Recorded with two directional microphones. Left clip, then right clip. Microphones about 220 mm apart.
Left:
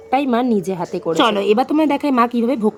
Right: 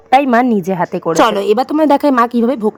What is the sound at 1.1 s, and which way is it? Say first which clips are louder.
A woman's voice: right 3 dB; 30° right (ahead or behind).